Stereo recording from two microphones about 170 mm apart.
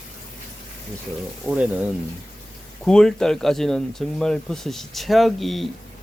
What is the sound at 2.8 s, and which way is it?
Speech, 5° left (ahead or behind).